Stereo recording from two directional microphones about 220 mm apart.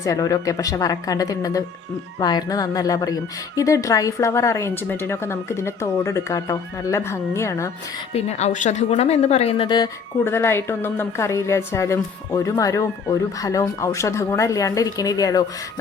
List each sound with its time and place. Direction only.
0.0 s a woman's voice: 15° left (ahead or behind)
8.1 s a woman's voice: 30° left (ahead or behind)